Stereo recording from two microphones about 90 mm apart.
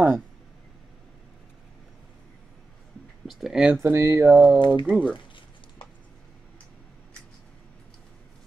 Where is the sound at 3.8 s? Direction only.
30° right (ahead or behind).